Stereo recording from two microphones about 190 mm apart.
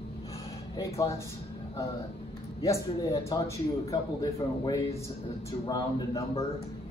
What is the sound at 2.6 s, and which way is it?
A man's voice, 15° left (ahead or behind).